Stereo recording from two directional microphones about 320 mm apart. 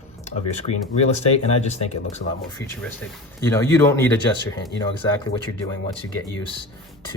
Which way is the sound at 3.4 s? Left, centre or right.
Centre.